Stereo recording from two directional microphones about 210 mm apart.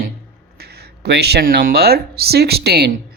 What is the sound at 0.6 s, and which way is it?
Speech, 50° right (ahead or behind).